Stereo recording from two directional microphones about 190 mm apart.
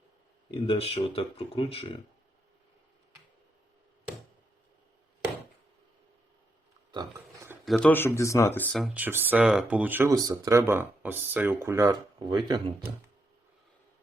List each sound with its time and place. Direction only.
0.5 s speech: 30° left (ahead or behind)
6.9 s burping: 20° right (ahead or behind)
7.6 s speech: 5° left (ahead or behind); by 12.7 s 25° right (ahead or behind)